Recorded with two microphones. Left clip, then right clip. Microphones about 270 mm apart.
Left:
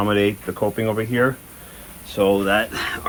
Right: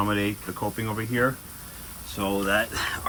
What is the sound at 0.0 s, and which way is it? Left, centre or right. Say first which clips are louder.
Speech: left 7 dB; left.